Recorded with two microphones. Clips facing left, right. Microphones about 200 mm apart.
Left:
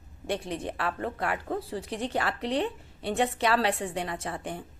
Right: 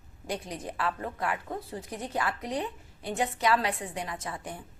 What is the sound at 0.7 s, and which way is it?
Speech, 65° left (ahead or behind).